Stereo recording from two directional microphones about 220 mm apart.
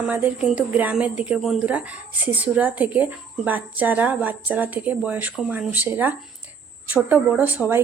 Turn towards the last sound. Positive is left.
turn(degrees=-10)  # may be behind; listen again after turning